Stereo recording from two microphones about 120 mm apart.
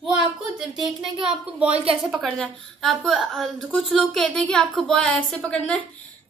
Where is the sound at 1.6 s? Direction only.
55° right (ahead or behind).